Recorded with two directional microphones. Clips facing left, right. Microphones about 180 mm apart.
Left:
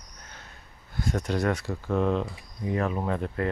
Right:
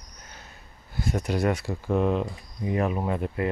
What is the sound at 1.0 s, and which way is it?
Speech, 10° right (ahead or behind).